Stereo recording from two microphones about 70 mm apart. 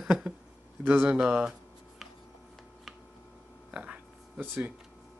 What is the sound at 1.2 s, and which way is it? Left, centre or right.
Speech, centre.